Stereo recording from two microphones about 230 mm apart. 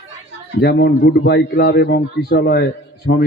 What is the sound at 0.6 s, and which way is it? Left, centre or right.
Speech, left.